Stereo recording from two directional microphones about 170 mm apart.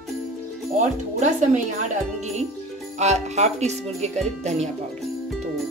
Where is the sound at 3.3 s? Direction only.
40° right (ahead or behind).